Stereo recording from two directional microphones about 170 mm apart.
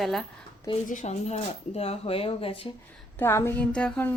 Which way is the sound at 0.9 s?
45° left (ahead or behind).